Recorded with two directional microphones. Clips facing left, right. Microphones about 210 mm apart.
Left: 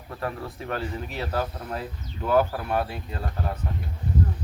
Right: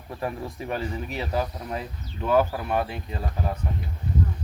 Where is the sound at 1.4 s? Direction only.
Centre (ahead or behind).